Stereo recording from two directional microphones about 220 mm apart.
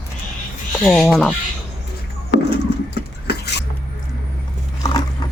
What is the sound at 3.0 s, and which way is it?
Vehicle, 50° left (ahead or behind).